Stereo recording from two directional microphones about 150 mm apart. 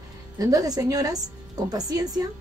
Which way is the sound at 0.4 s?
25° right (ahead or behind).